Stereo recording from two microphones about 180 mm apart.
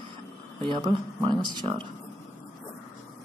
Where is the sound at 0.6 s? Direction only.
25° right (ahead or behind).